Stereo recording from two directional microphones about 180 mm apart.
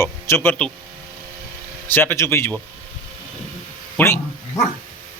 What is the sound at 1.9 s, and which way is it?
Speech, 15° left (ahead or behind).